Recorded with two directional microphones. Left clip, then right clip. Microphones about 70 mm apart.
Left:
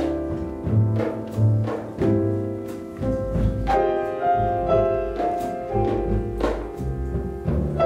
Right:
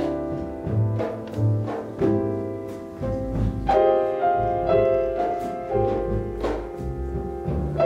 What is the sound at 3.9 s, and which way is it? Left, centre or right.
Music, centre.